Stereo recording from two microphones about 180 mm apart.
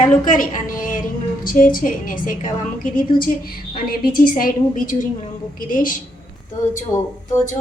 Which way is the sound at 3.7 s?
55° left (ahead or behind).